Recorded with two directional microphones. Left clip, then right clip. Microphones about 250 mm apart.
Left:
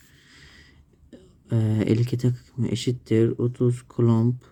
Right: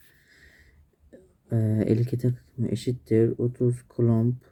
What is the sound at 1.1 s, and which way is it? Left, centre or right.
Speech, left.